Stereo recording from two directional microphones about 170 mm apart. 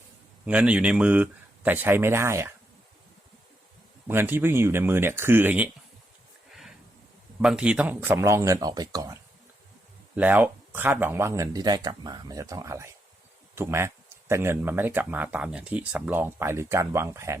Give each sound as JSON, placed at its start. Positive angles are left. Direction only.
{"t": 0.4, "sound": "speech", "side_deg": -5}
{"t": 4.1, "sound": "speech", "side_deg": -10}
{"t": 6.5, "sound": "a sound", "side_deg": 0}
{"t": 7.4, "sound": "speech", "side_deg": -5}
{"t": 10.2, "sound": "speech", "side_deg": -10}